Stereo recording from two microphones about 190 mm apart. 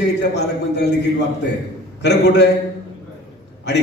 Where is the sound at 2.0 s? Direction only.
65° left (ahead or behind).